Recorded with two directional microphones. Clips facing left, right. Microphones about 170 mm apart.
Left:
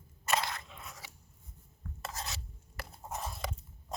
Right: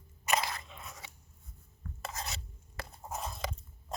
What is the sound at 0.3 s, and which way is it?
Crunch, centre (ahead or behind).